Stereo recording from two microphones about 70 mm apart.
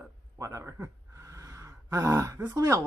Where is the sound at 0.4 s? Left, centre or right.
Right.